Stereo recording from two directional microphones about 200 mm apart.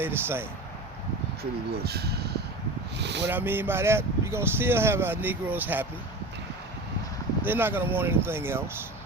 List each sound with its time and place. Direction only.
0.0 s speech: 10° right (ahead or behind)
1.7 s speech: 55° right (ahead or behind)
3.2 s speech: 10° right (ahead or behind)
7.4 s speech: 10° right (ahead or behind)